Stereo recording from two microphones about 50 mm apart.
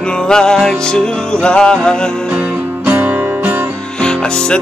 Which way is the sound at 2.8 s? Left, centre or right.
Right.